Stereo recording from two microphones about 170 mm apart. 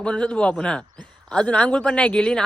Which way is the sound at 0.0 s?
5° left (ahead or behind).